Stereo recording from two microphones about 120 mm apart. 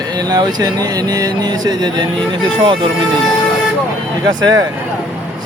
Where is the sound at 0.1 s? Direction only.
35° right (ahead or behind).